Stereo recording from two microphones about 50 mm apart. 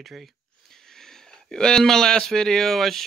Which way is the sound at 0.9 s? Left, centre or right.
Centre.